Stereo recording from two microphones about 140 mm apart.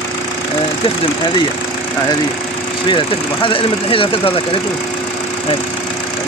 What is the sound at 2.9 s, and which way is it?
Speech, 35° left (ahead or behind).